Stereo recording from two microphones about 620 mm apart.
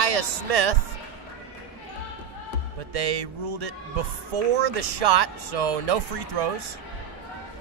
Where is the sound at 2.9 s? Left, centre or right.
Right.